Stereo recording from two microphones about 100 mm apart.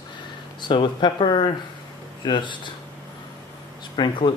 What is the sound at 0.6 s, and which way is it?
Speech, 50° left (ahead or behind).